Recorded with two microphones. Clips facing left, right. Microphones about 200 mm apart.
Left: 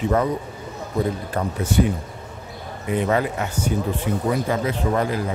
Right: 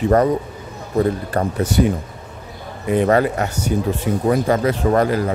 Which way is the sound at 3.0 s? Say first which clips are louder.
Right 6 dB; 60° right (ahead or behind).